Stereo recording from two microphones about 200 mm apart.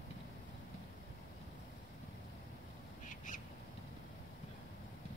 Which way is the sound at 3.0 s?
40° left (ahead or behind).